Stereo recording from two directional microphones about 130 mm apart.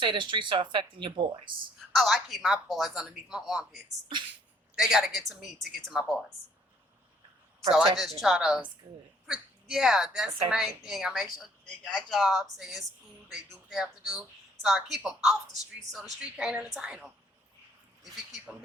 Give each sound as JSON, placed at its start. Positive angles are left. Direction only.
{"t": 0.0, "sound": "speech", "side_deg": -40}
{"t": 1.9, "sound": "speech", "side_deg": 0}
{"t": 7.7, "sound": "speech", "side_deg": 0}